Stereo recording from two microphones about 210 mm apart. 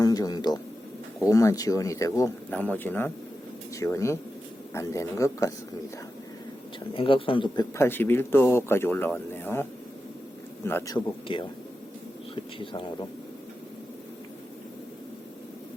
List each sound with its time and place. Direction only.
0.0 s a sound: 15° left (ahead or behind)
1.2 s speech: 15° left (ahead or behind)
6.9 s speech: 25° left (ahead or behind)
10.9 s speech: 25° left (ahead or behind)
12.5 s speech: 25° left (ahead or behind)